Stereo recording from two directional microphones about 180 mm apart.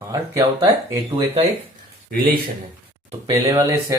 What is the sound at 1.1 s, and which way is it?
Speech, 35° right (ahead or behind).